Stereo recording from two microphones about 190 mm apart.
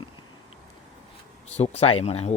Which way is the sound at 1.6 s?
35° left (ahead or behind).